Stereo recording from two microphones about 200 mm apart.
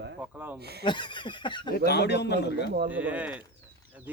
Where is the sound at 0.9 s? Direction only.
25° left (ahead or behind).